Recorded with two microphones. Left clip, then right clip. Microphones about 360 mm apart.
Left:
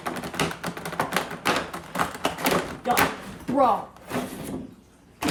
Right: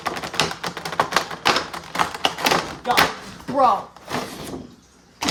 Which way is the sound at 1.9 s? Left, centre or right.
Centre.